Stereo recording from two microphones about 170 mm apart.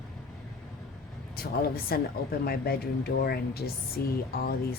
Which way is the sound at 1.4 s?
60° left (ahead or behind).